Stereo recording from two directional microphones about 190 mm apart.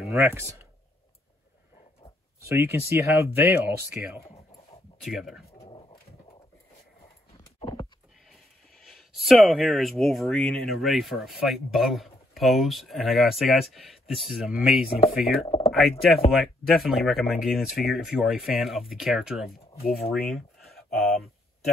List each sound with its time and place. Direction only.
0.2 s speech: 15° right (ahead or behind)
2.4 s speech: 15° right (ahead or behind)
5.6 s dog: 25° left (ahead or behind)
8.8 s speech: centre (ahead or behind)
15.4 s speech: 30° left (ahead or behind)
15.7 s speech: centre (ahead or behind)